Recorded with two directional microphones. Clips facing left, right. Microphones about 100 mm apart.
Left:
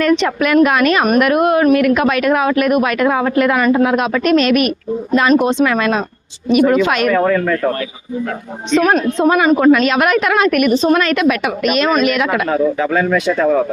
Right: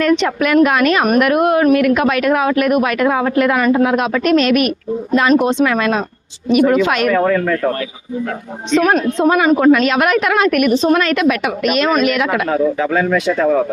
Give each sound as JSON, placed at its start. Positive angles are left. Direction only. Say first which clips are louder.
{"t": 0.0, "sound": "a woman's voice", "louder": "even", "side_deg": 20}
{"t": 6.6, "sound": "a woman's voice", "louder": "even", "side_deg": 25}
{"t": 8.7, "sound": "a woman's voice", "louder": "even", "side_deg": 20}